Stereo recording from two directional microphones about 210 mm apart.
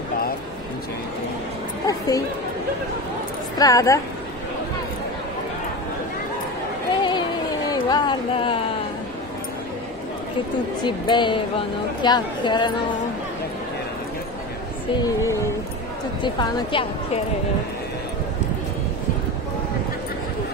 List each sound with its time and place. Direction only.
1.9 s speech: 15° left (ahead or behind)
3.5 s a woman's voice: 15° left (ahead or behind)
7.0 s a sound: 20° left (ahead or behind)
10.8 s speech: 20° left (ahead or behind)
15.0 s a woman's voice: 15° left (ahead or behind)